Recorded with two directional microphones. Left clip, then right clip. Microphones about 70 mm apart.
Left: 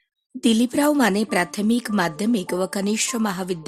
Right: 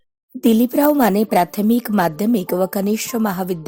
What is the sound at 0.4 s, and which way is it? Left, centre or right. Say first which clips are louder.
A woman's voice: right 4 dB; right.